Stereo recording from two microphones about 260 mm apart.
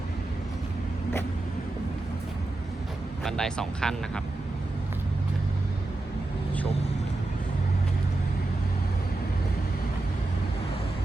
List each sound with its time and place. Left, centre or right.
3.2 s speech: centre